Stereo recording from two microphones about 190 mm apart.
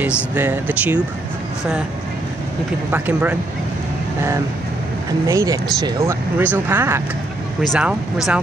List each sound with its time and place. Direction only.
0.3 s speech: 10° right (ahead or behind)
2.9 s speech: 10° right (ahead or behind)
5.2 s speech: 15° right (ahead or behind)
7.6 s speech: centre (ahead or behind)